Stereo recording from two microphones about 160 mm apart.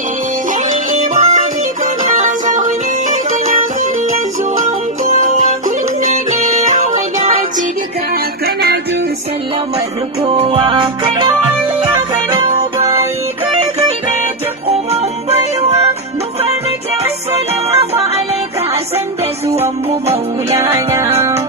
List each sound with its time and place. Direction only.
0.7 s music: 50° right (ahead or behind)
4.6 s music: 50° right (ahead or behind)
10.2 s music: 35° right (ahead or behind)
12.7 s music: 15° right (ahead or behind)
14.7 s music: 40° right (ahead or behind)
17.6 s music: 40° right (ahead or behind)
20.4 s music: 15° right (ahead or behind)